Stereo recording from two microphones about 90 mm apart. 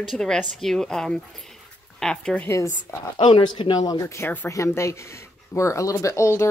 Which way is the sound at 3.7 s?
45° left (ahead or behind).